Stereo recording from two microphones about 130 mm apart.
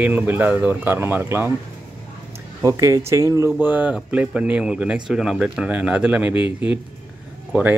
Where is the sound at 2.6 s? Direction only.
25° right (ahead or behind).